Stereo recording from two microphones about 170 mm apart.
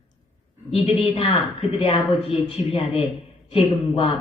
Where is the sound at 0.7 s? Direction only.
35° left (ahead or behind).